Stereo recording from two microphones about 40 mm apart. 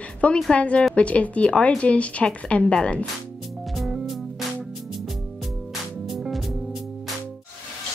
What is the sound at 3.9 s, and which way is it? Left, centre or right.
Music, centre.